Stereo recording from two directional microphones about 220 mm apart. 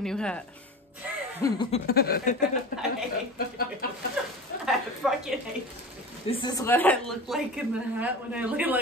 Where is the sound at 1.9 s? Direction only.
45° left (ahead or behind).